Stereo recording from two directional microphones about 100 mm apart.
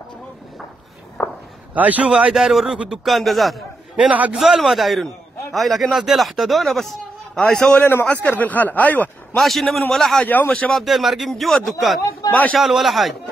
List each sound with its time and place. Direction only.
1.2 s a sound: 5° right (ahead or behind)
1.8 s a man's voice: 15° right (ahead or behind); by 3.5 s centre (ahead or behind)
3.9 s a man's voice: 10° right (ahead or behind)
4.4 s a man's voice: centre (ahead or behind); by 9.4 s 15° left (ahead or behind)
9.4 s a man's voice: centre (ahead or behind)
10.2 s a man's voice: 15° left (ahead or behind)
10.7 s a man's voice: centre (ahead or behind)
12.2 s a sound: 40° left (ahead or behind)
12.5 s a man's voice: centre (ahead or behind)